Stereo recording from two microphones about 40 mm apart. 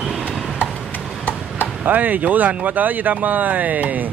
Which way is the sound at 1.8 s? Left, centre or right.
Right.